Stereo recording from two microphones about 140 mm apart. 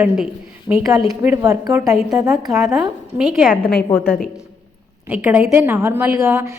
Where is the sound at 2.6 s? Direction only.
5° right (ahead or behind).